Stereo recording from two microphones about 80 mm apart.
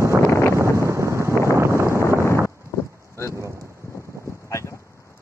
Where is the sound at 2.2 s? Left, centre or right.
Left.